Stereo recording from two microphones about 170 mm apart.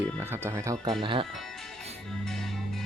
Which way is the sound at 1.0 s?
30° right (ahead or behind).